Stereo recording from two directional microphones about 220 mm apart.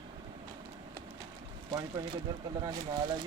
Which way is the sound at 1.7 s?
20° right (ahead or behind).